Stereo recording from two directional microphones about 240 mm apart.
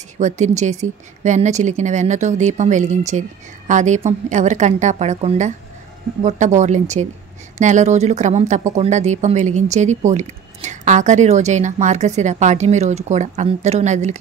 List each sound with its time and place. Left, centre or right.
0.2 s speech: right